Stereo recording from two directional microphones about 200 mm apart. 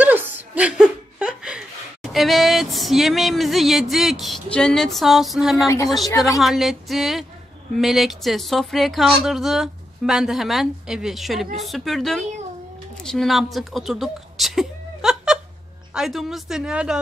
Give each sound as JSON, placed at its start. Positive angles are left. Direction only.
{"t": 0.0, "sound": "chuckle", "side_deg": -10}
{"t": 2.1, "sound": "speech", "side_deg": 0}
{"t": 6.0, "sound": "a woman's voice", "side_deg": 15}
{"t": 6.4, "sound": "speech", "side_deg": 0}